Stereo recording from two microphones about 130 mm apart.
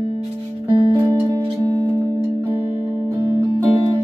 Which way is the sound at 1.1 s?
25° right (ahead or behind).